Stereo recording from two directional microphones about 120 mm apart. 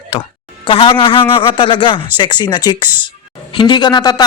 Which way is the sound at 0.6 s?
45° left (ahead or behind).